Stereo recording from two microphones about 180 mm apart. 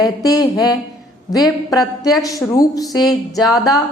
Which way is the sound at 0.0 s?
20° left (ahead or behind).